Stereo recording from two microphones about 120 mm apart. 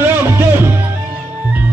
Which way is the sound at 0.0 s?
20° right (ahead or behind).